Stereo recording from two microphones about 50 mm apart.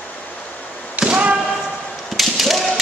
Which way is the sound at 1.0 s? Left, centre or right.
Right.